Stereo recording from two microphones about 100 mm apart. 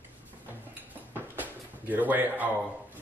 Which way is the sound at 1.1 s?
15° right (ahead or behind).